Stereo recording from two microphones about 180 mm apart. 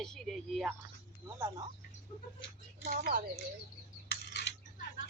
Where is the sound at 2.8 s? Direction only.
50° right (ahead or behind).